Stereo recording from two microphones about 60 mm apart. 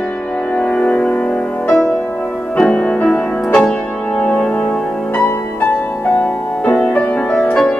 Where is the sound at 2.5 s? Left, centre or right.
Centre.